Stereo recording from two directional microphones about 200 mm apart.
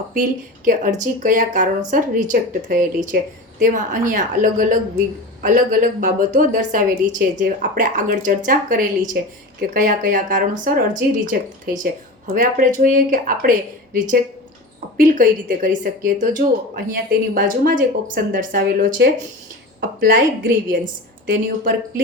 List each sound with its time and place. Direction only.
0.1 s speech: 40° right (ahead or behind)
14.9 s speech: 40° right (ahead or behind)